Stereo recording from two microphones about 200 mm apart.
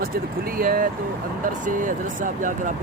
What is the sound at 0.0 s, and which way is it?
Speech, 45° right (ahead or behind).